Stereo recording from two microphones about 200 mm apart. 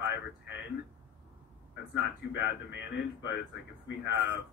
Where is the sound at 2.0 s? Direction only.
60° left (ahead or behind).